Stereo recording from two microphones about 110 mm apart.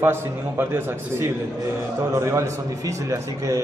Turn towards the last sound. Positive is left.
turn(degrees=-30)  # may be behind; listen again after turning